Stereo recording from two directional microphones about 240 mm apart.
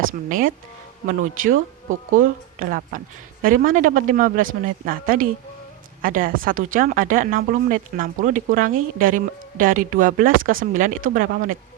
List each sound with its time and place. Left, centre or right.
0.1 s speech: right